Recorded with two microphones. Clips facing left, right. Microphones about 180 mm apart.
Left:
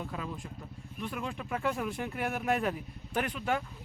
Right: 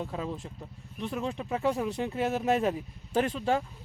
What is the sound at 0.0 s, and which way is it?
Speech, 30° right (ahead or behind).